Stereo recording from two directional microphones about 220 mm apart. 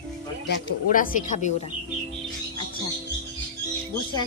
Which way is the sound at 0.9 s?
35° left (ahead or behind).